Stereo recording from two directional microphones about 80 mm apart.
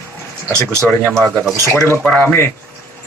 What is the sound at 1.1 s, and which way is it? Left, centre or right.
Speech, centre.